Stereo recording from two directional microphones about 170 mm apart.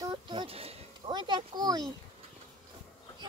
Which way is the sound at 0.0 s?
25° right (ahead or behind).